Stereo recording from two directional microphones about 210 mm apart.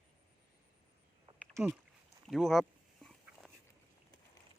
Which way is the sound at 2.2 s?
Centre (ahead or behind).